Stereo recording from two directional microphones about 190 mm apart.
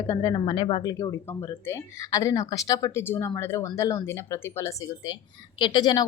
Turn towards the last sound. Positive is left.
turn(degrees=25)  # may be behind; listen again after turning